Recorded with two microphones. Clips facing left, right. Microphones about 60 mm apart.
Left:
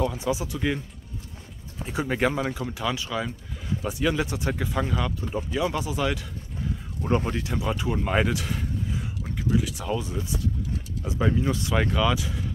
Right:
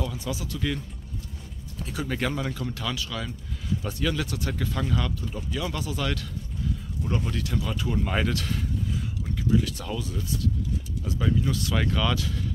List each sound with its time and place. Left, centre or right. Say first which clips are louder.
0.0 s speech: left 6 dB; left
7.0 s speech: left 5 dB; left; by 9.9 s centre
9.9 s speech: left 2 dB; left